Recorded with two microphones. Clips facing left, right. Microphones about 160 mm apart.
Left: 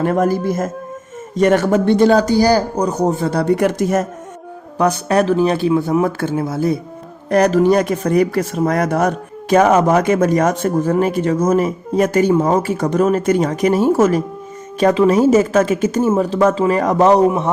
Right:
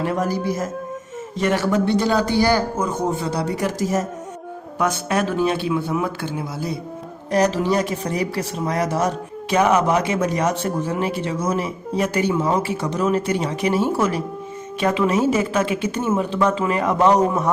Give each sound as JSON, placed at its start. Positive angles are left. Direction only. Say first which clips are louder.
{"t": 0.0, "sound": "speech", "louder": "left 6 dB", "side_deg": 50}
{"t": 3.2, "sound": "speech", "louder": "left 7 dB", "side_deg": 55}
{"t": 4.8, "sound": "speech", "louder": "left 6 dB", "side_deg": 35}